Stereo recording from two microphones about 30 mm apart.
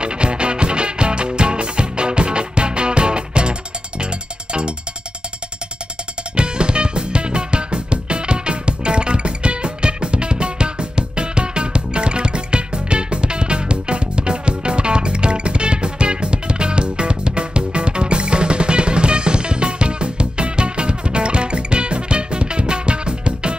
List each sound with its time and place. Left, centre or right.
0.0 s music: right
6.3 s music: right